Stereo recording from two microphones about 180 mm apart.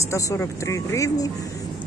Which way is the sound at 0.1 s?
15° left (ahead or behind).